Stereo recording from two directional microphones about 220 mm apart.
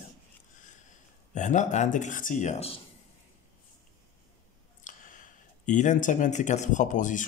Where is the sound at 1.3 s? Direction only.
35° left (ahead or behind).